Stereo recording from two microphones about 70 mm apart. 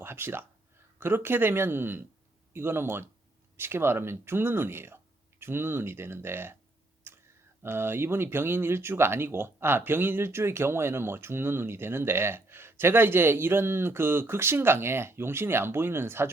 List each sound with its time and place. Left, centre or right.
0.0 s speech: right
7.1 s a sound: right
7.6 s speech: right